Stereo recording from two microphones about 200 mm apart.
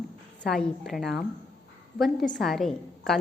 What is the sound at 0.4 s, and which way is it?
A woman's voice, centre (ahead or behind).